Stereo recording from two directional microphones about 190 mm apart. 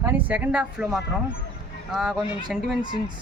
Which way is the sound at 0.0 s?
10° right (ahead or behind).